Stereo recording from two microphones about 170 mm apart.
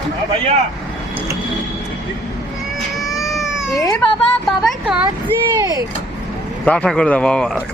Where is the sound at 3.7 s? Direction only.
20° left (ahead or behind).